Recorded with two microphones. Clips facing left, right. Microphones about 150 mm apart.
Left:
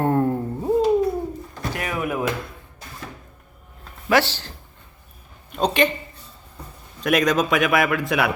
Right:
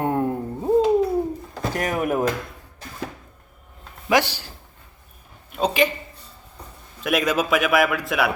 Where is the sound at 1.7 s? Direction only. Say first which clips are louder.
Right 3 dB; 45° right (ahead or behind).